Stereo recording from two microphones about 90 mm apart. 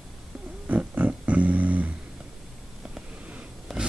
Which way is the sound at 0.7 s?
15° right (ahead or behind).